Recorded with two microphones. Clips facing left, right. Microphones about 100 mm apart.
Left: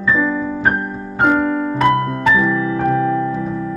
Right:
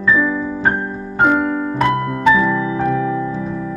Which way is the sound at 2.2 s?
20° right (ahead or behind).